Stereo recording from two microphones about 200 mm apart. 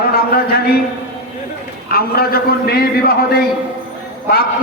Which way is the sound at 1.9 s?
50° left (ahead or behind).